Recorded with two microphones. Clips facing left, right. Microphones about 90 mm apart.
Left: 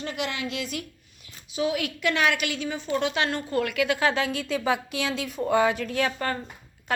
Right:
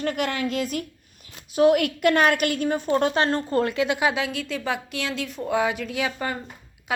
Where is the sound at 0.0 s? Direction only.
50° right (ahead or behind).